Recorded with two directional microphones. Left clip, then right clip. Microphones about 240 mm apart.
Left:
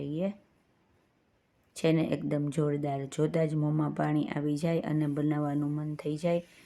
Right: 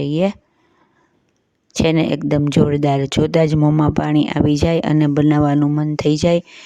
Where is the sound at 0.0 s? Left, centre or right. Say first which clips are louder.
Right 16 dB; right.